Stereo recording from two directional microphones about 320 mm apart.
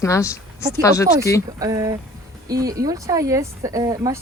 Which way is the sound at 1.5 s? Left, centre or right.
Centre.